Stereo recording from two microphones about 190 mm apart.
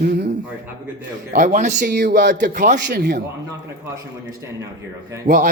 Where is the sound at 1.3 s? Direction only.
45° right (ahead or behind); by 2.4 s 65° right (ahead or behind).